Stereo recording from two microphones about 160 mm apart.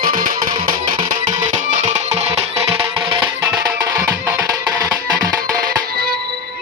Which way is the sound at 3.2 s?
10° right (ahead or behind).